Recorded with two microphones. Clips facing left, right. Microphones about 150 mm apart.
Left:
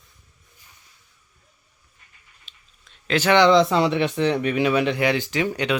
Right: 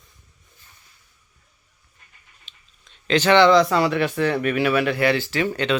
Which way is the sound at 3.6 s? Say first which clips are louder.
Even; 25° left (ahead or behind).